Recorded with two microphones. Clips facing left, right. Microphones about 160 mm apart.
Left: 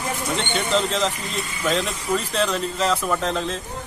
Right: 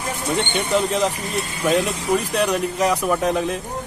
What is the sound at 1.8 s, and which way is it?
Speech, 70° right (ahead or behind).